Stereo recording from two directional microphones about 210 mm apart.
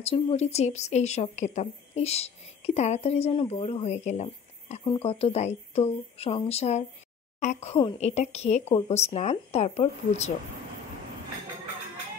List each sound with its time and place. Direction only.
0.0 s a woman's voice: 25° left (ahead or behind)